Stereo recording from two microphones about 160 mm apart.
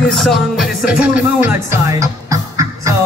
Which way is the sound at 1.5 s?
20° right (ahead or behind).